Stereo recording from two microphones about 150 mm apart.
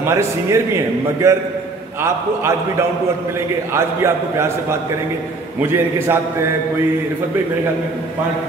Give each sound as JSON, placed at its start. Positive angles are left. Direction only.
{"t": 0.0, "sound": "a man's voice", "side_deg": -20}
{"t": 3.7, "sound": "a man's voice", "side_deg": -15}